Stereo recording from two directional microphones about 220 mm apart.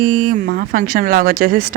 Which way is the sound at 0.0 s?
40° right (ahead or behind).